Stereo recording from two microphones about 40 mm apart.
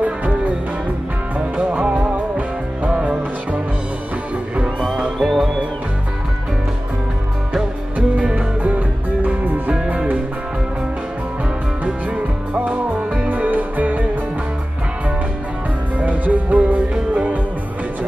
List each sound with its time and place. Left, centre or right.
0.0 s music: right
1.6 s music: right
5.2 s music: centre
8.2 s music: right
13.3 s music: right
16.0 s music: right